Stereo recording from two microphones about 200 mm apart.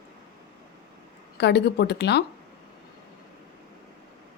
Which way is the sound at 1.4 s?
55° left (ahead or behind).